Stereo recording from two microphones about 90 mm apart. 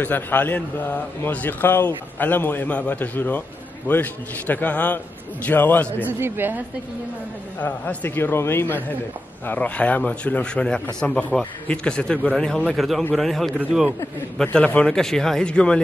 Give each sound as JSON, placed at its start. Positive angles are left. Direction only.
{"t": 0.0, "sound": "a man's voice", "side_deg": 20}
{"t": 6.0, "sound": "a woman's voice", "side_deg": -25}
{"t": 7.6, "sound": "a man's voice", "side_deg": 20}